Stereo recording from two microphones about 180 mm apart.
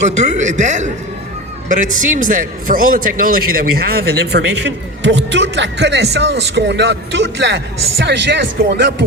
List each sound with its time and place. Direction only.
0.2 s a man's voice: 40° right (ahead or behind); by 9.0 s 75° right (ahead or behind)